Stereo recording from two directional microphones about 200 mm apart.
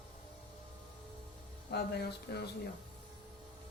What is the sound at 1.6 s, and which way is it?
Speech, 55° left (ahead or behind).